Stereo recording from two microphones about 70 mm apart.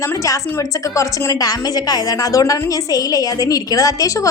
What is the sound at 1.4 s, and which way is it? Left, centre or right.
A woman's voice, left.